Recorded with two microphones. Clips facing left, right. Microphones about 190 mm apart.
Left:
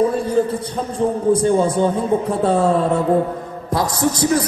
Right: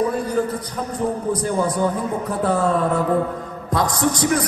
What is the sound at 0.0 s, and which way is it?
A man's voice, 25° left (ahead or behind).